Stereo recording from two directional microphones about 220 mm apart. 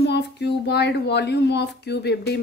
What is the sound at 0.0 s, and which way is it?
Speech, 50° left (ahead or behind).